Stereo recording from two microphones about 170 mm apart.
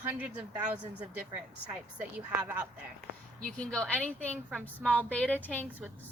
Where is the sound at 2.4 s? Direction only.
20° right (ahead or behind).